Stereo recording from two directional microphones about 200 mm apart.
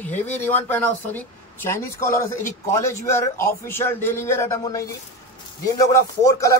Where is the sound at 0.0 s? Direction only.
10° left (ahead or behind).